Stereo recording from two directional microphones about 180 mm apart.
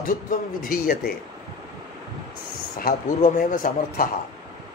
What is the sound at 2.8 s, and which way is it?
A man's voice, 50° left (ahead or behind).